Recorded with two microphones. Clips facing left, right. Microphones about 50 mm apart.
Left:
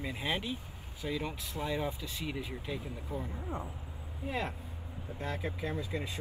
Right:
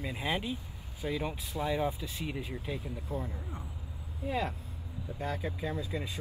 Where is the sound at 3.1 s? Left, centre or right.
Left.